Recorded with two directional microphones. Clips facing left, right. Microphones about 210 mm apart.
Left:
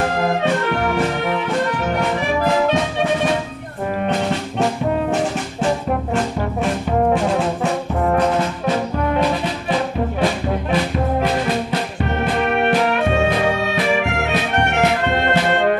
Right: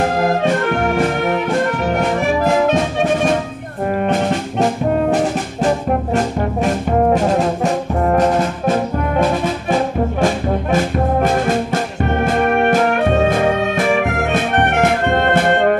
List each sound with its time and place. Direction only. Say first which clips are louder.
0.3 s music: right 3 dB; 50° right (ahead or behind)
4.0 s brass instrument: right 2 dB; 50° right (ahead or behind)
7.1 s brass instrument: right 3 dB; 40° right (ahead or behind)
10.2 s brass instrument: right 2 dB; 45° right (ahead or behind)
12.3 s music: right 3 dB; 45° right (ahead or behind)